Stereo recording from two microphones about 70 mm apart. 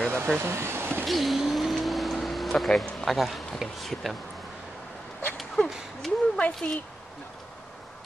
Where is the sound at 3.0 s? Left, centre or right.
Centre.